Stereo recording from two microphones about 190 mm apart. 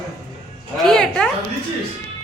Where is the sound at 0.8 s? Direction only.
5° left (ahead or behind).